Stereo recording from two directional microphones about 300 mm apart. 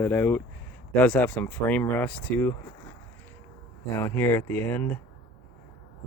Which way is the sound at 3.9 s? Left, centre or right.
Centre.